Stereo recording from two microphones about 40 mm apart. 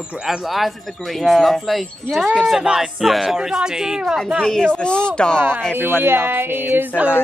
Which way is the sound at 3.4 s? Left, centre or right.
Centre.